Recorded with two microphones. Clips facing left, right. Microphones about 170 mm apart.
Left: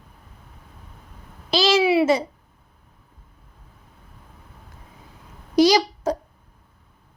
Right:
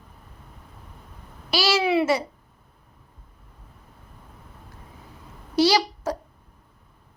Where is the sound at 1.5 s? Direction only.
20° left (ahead or behind).